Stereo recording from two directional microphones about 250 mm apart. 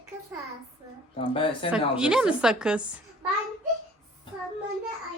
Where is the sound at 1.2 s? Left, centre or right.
Left.